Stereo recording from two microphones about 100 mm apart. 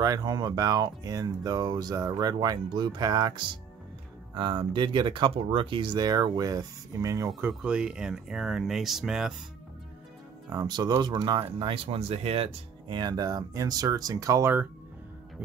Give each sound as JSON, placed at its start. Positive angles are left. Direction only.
{"t": 0.0, "sound": "speech", "side_deg": -40}
{"t": 7.4, "sound": "speech", "side_deg": -10}
{"t": 10.5, "sound": "speech", "side_deg": -40}
{"t": 11.4, "sound": "speech", "side_deg": -65}
{"t": 12.8, "sound": "speech", "side_deg": -50}